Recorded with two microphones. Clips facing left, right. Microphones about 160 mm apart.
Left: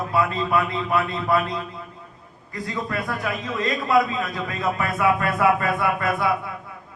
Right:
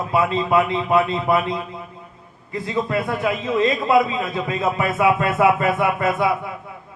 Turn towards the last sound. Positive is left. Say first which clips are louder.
# right 3 dB
turn(degrees=-20)  # may be behind; listen again after turning